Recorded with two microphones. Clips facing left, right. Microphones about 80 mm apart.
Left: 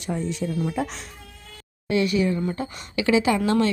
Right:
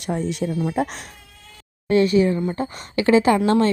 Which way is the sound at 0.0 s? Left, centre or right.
Right.